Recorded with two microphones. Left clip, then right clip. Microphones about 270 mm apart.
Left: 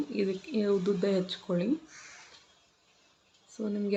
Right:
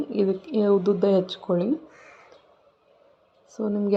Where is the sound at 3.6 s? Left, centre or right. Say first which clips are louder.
Right 8 dB; centre.